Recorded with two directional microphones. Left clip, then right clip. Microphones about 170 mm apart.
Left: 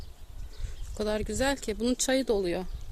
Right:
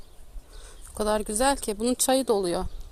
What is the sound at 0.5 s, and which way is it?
Speech, centre (ahead or behind).